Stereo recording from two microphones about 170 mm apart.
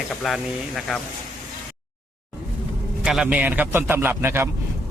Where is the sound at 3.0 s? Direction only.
5° right (ahead or behind).